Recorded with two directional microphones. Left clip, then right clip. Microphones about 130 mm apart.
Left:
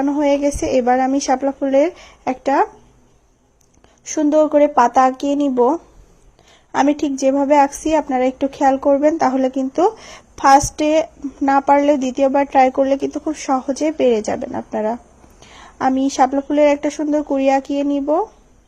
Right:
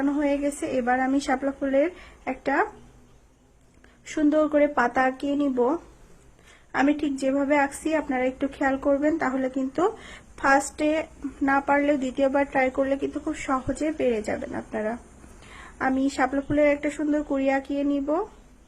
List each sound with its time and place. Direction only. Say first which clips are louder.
0.0 s a woman's voice: left 8 dB; 45° left (ahead or behind)
4.1 s a woman's voice: left 8 dB; 30° left (ahead or behind)
6.7 s a woman's voice: left 7 dB; 35° left (ahead or behind)